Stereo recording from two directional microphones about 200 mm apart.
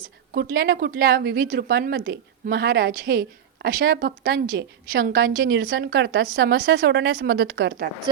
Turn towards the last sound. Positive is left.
turn(degrees=-55)  # may be behind; listen again after turning